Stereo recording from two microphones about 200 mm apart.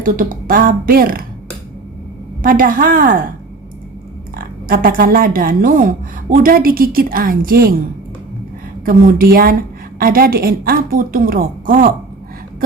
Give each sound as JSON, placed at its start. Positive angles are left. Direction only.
{"t": 0.0, "sound": "speech", "side_deg": -40}
{"t": 2.4, "sound": "speech", "side_deg": -45}
{"t": 4.4, "sound": "a woman's voice", "side_deg": -50}
{"t": 8.8, "sound": "speech", "side_deg": -45}